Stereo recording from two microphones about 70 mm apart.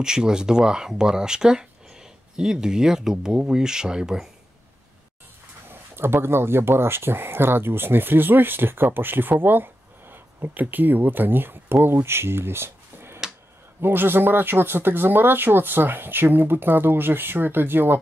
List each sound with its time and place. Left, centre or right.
0.0 s speech: centre
5.7 s speech: right